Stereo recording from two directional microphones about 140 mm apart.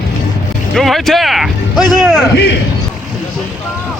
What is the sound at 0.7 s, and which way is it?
Speech, centre (ahead or behind).